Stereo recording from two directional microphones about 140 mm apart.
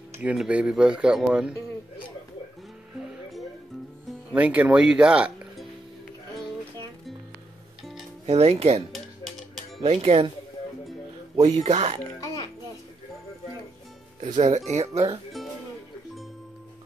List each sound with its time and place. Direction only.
0.2 s speech: 10° right (ahead or behind)
4.3 s speech: 10° right (ahead or behind)
8.3 s speech: 50° right (ahead or behind)
11.5 s speech: 50° right (ahead or behind)
14.2 s speech: 55° right (ahead or behind)